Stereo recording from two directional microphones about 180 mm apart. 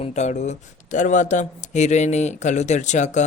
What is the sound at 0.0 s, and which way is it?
Speech, 40° left (ahead or behind).